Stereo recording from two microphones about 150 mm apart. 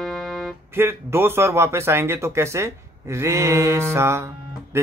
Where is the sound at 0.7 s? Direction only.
15° right (ahead or behind).